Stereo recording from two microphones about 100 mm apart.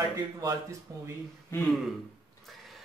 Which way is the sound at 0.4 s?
30° right (ahead or behind).